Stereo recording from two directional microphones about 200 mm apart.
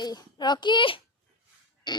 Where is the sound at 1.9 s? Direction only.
25° left (ahead or behind).